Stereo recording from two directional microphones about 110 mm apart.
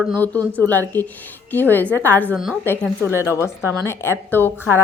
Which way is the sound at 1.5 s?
15° left (ahead or behind).